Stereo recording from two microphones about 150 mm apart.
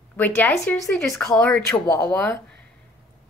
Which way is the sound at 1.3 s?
5° left (ahead or behind).